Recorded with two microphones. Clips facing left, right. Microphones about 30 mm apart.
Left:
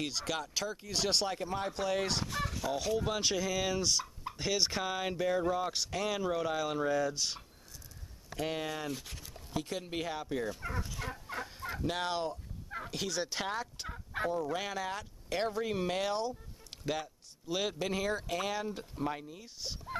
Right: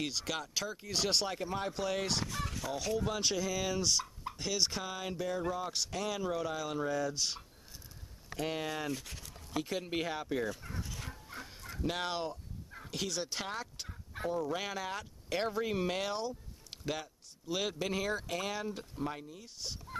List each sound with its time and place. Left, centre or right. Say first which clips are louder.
0.0 s speech: left 1 dB; centre
11.0 s fowl: left 6 dB; left
11.8 s speech: left 1 dB; centre
13.8 s fowl: left 8 dB; left
14.3 s speech: left 1 dB; centre